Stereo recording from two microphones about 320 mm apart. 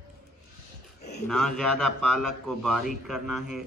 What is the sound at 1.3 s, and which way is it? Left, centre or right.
Speech, centre.